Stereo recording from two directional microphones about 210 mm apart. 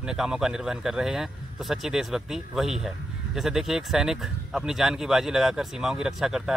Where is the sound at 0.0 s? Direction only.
5° right (ahead or behind).